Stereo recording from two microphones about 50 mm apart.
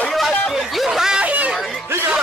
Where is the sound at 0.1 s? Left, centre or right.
Centre.